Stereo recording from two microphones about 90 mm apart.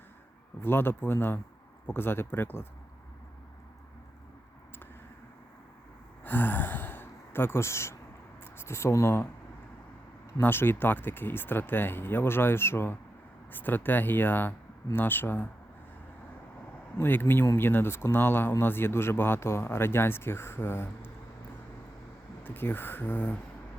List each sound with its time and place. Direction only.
0.6 s speech: 25° left (ahead or behind)
6.2 s speech: 20° left (ahead or behind)
10.4 s speech: 25° left (ahead or behind)
17.0 s speech: 25° left (ahead or behind)
22.4 s speech: 25° left (ahead or behind)